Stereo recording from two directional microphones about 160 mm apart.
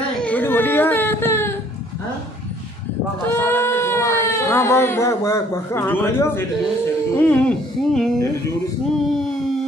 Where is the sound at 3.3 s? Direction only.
15° left (ahead or behind).